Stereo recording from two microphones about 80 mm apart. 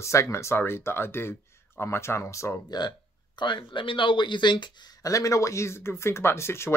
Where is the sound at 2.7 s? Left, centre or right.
Left.